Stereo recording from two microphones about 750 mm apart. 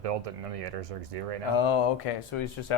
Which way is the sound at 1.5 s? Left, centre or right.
Left.